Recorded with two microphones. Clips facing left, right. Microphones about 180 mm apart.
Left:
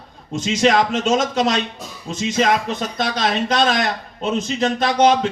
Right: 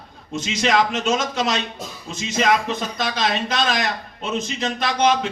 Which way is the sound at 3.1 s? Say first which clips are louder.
Left 4 dB; 35° left (ahead or behind).